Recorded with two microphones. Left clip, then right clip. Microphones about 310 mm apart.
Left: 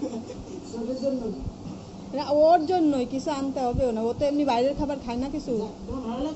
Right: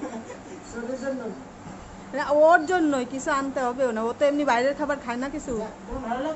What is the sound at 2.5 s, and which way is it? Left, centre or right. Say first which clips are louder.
A woman's voice: right 1 dB; centre.